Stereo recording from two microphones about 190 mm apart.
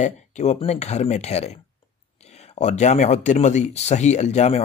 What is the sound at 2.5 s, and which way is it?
Speech, 35° left (ahead or behind).